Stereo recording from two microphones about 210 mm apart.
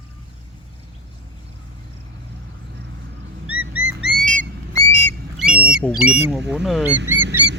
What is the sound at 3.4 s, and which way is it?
Bird, 85° right.